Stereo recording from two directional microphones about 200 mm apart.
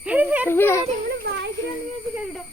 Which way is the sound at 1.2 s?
55° right (ahead or behind).